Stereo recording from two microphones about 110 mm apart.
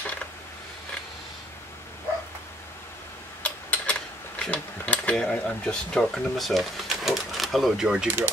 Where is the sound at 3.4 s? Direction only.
10° left (ahead or behind).